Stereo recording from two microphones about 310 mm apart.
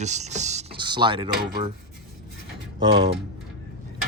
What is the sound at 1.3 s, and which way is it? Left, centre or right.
Speech, right.